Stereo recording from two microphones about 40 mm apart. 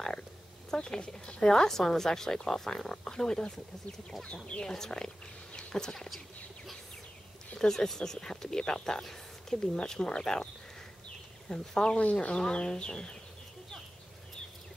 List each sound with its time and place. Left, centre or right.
0.7 s speech: centre
4.6 s speech: centre
5.6 s a sound: centre
5.9 s a sound: centre
7.5 s speech: centre
12.0 s speech: left
12.4 s speech: left